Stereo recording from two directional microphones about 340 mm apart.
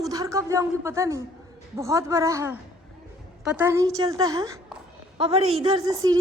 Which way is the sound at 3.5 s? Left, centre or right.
Centre.